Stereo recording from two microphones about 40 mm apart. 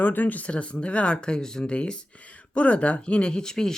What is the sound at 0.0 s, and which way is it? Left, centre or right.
Speech, left.